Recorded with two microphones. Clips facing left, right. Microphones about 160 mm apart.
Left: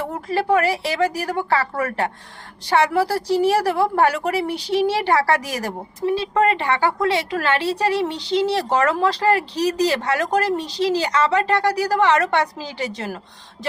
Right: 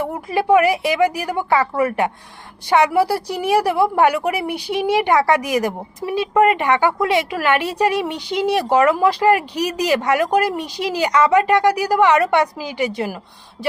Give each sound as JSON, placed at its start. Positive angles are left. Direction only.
{"t": 0.1, "sound": "a woman's voice", "side_deg": -15}